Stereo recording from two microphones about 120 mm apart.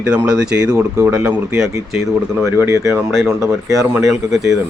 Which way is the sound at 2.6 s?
20° right (ahead or behind).